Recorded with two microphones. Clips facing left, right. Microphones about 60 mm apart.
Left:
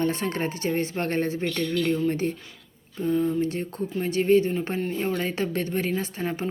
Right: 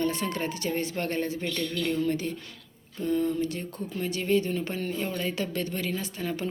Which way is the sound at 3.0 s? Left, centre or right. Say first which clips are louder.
Left 3 dB; centre.